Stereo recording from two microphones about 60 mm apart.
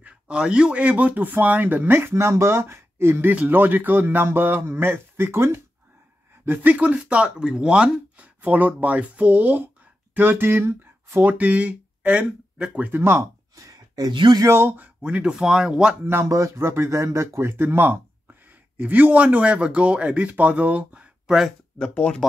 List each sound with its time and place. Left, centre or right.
0.0 s speech: centre; by 11.2 s right
11.2 s speech: right
12.8 s speech: right
13.6 s speech: right
14.5 s speech: right
14.8 s speech: right
16.3 s speech: right; by 21.5 s centre
21.9 s speech: centre